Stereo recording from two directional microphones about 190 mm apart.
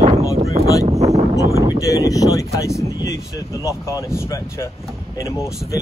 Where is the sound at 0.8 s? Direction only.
35° right (ahead or behind).